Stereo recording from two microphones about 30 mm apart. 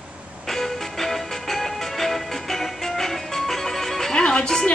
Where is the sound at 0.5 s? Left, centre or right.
Centre.